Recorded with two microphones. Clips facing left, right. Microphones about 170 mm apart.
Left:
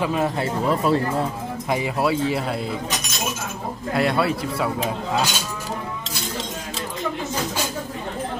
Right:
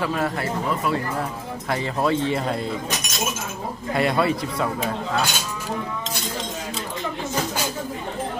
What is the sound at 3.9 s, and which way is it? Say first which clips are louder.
Speech: even; centre (ahead or behind).